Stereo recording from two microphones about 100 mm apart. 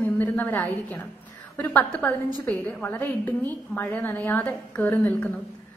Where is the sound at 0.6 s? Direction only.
15° left (ahead or behind).